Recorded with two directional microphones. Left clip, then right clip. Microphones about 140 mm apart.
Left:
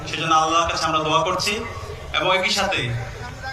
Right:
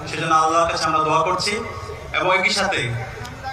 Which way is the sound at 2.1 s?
40° right (ahead or behind).